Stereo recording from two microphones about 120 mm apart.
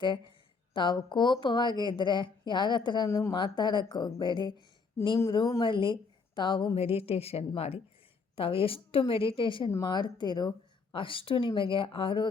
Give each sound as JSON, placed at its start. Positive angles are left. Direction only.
{"t": 0.0, "sound": "speech", "side_deg": 40}
{"t": 3.1, "sound": "speech", "side_deg": 25}
{"t": 3.3, "sound": "speech", "side_deg": 40}
{"t": 5.6, "sound": "a woman's voice", "side_deg": 45}
{"t": 6.7, "sound": "a woman's voice", "side_deg": 55}